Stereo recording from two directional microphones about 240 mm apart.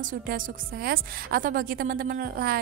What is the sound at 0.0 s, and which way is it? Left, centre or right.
A woman's voice, right.